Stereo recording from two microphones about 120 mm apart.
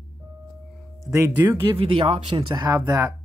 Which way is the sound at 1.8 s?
45° right (ahead or behind).